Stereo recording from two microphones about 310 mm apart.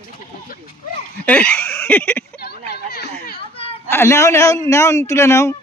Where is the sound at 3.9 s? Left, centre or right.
Centre.